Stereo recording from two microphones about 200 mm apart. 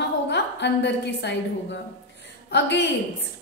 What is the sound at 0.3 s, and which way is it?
A woman's voice, 60° left (ahead or behind).